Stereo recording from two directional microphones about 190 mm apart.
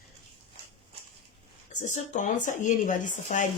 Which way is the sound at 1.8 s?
40° left (ahead or behind).